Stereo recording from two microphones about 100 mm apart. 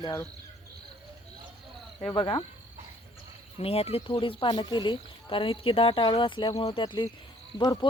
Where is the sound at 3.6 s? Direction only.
90° left.